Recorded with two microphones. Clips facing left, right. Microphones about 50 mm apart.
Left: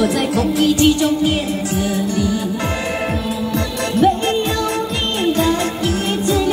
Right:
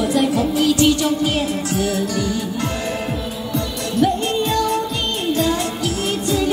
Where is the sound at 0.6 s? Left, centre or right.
Left.